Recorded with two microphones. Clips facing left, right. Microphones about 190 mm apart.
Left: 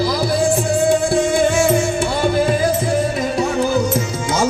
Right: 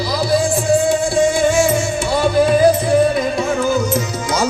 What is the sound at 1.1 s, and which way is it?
Music, 60° left (ahead or behind).